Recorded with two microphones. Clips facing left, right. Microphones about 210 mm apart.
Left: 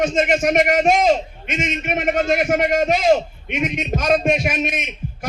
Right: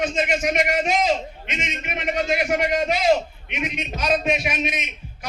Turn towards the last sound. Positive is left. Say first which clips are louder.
# left 4 dB
turn(degrees=50)  # may be behind; listen again after turning